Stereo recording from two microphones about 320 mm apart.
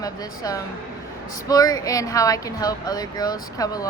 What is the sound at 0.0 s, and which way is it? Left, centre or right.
Speech, centre.